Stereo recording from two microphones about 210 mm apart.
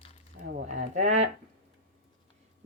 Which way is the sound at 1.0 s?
35° right (ahead or behind).